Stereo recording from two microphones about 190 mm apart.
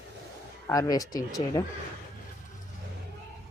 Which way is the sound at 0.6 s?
20° left (ahead or behind).